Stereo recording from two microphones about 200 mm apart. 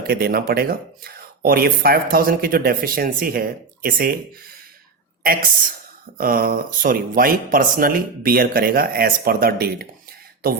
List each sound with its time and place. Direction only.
0.1 s speech: 50° right (ahead or behind)